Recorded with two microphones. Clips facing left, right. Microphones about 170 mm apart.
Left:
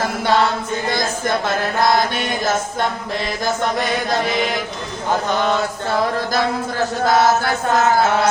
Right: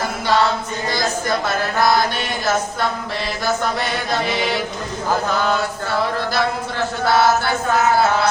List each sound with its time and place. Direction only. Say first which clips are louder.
7.0 s chant: left 1 dB; 40° left (ahead or behind)